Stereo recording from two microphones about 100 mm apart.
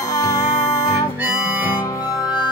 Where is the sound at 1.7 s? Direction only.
40° left (ahead or behind).